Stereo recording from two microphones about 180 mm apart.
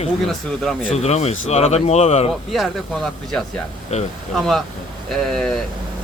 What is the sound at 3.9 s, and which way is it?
Speech, 40° left (ahead or behind).